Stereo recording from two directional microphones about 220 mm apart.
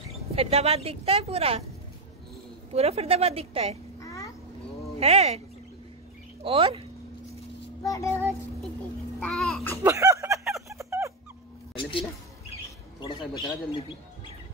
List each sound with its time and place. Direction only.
0.4 s a woman's voice: 30° right (ahead or behind)
2.7 s a woman's voice: 30° right (ahead or behind)
4.0 s a sound: 15° left (ahead or behind)
4.9 s a woman's voice: 30° right (ahead or behind)
6.4 s a woman's voice: 25° right (ahead or behind)
7.8 s child singing: 15° left (ahead or behind)
9.2 s speech: centre (ahead or behind)
9.8 s music: 15° right (ahead or behind)
11.8 s a sound: 25° left (ahead or behind)
13.0 s speech: 20° left (ahead or behind)